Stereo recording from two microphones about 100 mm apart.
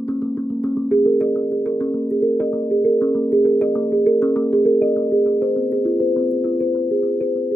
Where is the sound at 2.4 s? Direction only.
15° left (ahead or behind).